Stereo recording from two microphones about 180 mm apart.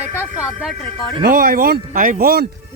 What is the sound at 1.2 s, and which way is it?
Speech, 55° right (ahead or behind).